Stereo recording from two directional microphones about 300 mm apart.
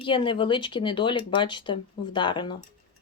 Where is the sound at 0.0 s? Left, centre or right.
Centre.